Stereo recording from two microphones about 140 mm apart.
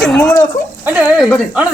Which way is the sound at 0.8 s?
10° right (ahead or behind).